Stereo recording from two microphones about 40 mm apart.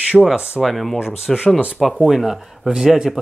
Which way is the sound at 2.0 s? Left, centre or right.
Centre.